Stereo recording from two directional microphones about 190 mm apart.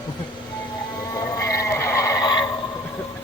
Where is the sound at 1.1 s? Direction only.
15° left (ahead or behind).